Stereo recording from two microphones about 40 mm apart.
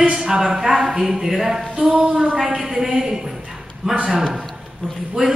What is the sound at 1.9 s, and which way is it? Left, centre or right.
Speech, right.